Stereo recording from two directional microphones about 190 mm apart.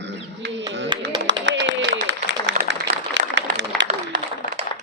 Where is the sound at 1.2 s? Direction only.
75° right (ahead or behind).